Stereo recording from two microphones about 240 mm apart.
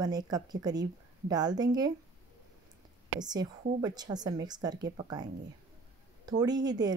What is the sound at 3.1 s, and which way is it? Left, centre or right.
Speech, centre.